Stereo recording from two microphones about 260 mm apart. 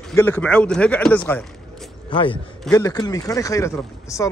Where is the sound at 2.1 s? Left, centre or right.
Centre.